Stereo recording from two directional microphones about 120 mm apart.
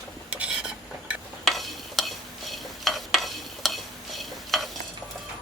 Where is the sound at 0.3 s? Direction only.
10° right (ahead or behind).